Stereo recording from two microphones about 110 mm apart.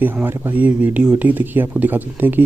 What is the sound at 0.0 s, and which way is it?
Speech, 20° right (ahead or behind).